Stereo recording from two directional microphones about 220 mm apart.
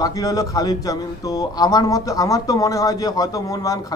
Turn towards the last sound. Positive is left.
turn(degrees=15)  # may be behind; listen again after turning